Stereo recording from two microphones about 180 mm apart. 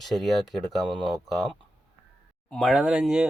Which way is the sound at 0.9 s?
25° right (ahead or behind).